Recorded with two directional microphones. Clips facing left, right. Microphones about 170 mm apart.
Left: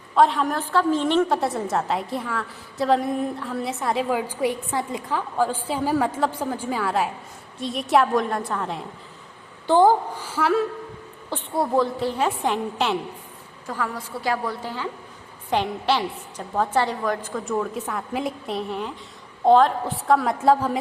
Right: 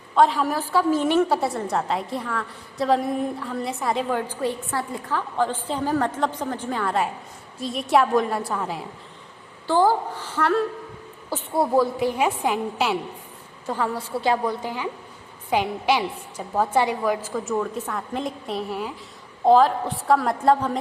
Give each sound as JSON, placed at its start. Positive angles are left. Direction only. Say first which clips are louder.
{"t": 0.2, "sound": "a woman's voice", "louder": "even", "side_deg": 0}
{"t": 9.6, "sound": "a woman's voice", "louder": "left 3 dB", "side_deg": 20}
{"t": 11.3, "sound": "a woman's voice", "louder": "right 2 dB", "side_deg": -10}
{"t": 13.7, "sound": "a woman's voice", "louder": "right 3 dB", "side_deg": -25}